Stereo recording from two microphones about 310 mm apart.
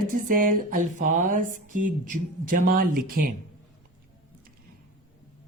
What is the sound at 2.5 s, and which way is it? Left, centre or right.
Speech, right.